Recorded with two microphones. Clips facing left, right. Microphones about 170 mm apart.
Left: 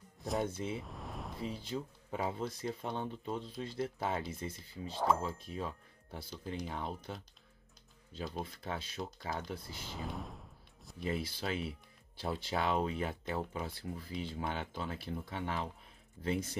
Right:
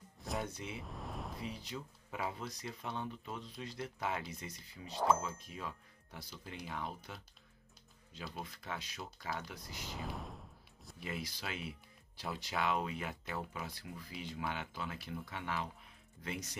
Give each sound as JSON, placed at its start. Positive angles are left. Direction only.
{"t": 0.4, "sound": "speech", "side_deg": 30}
{"t": 0.7, "sound": "a sound", "side_deg": 0}
{"t": 1.4, "sound": "speech", "side_deg": 30}
{"t": 4.9, "sound": "speech", "side_deg": 0}
{"t": 5.6, "sound": "speech", "side_deg": 30}
{"t": 8.2, "sound": "speech", "side_deg": 30}
{"t": 9.8, "sound": "a sound", "side_deg": 0}
{"t": 11.1, "sound": "speech", "side_deg": 30}